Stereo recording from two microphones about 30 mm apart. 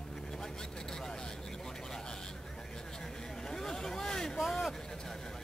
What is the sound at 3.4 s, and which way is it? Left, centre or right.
Vehicle, centre.